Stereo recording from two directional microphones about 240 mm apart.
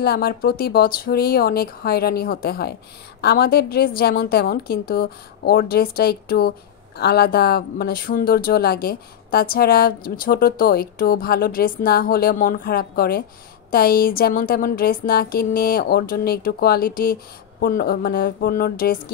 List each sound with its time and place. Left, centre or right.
0.0 s speech: left